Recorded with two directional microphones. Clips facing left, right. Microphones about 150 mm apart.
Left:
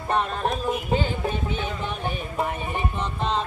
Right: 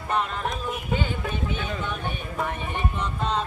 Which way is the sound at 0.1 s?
35° left (ahead or behind).